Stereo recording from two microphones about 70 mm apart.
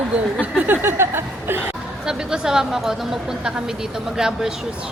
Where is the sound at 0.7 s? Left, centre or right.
Right.